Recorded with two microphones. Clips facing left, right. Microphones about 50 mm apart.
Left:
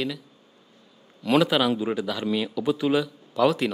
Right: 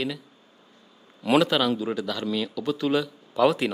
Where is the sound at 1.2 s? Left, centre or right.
Centre.